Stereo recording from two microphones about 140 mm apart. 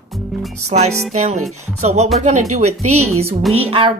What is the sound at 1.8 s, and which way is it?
Speech, 55° right (ahead or behind).